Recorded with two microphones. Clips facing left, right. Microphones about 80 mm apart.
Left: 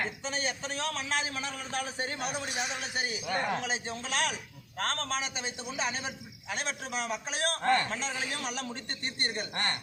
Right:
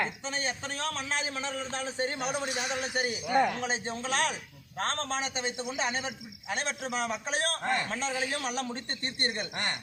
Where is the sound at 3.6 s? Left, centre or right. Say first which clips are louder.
Right 2 dB; right.